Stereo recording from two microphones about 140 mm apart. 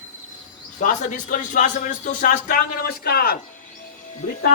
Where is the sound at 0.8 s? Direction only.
70° left (ahead or behind); by 3.3 s 90° left.